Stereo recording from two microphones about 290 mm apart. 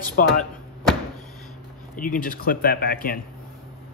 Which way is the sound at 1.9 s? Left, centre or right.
Left.